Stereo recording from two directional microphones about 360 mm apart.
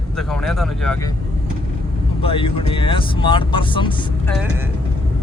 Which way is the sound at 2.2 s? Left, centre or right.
Centre.